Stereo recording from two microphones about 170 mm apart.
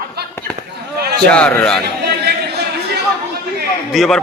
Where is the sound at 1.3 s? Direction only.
10° left (ahead or behind).